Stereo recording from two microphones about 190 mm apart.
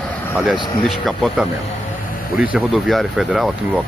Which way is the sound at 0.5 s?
Centre (ahead or behind).